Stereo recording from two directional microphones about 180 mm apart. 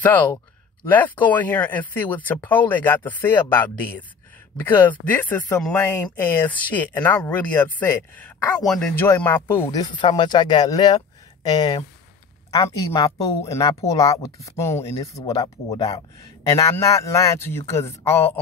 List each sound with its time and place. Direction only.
0.0 s speech: 10° left (ahead or behind); by 16.0 s 30° left (ahead or behind)
16.5 s speech: 15° left (ahead or behind)